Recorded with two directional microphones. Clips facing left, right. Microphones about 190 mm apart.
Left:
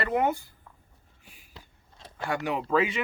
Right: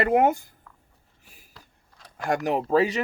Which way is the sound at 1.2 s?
40° right (ahead or behind).